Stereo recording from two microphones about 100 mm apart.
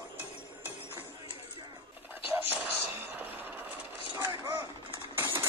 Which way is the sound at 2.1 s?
20° right (ahead or behind).